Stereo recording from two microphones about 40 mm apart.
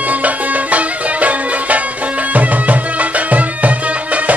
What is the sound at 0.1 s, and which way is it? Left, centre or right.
Music, right.